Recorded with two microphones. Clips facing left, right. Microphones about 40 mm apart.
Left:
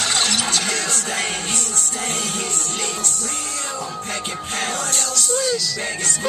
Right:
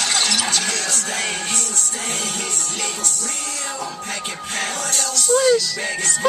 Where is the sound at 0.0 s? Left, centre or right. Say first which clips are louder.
Even; left.